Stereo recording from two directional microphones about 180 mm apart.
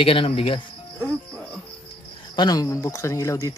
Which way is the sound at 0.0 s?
30° left (ahead or behind).